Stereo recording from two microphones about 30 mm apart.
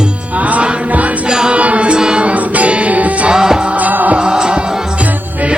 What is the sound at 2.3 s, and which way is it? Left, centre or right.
Music, right.